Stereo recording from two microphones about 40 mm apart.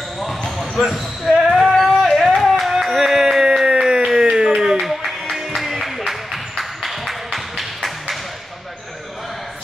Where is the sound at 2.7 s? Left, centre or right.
Centre.